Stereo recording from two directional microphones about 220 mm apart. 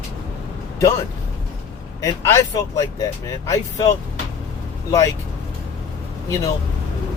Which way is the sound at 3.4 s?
15° left (ahead or behind).